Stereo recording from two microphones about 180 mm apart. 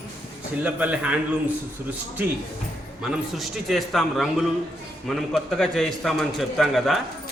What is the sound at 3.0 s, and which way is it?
A man's voice, centre (ahead or behind).